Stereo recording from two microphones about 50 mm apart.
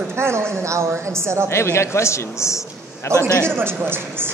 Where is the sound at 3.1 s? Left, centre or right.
Right.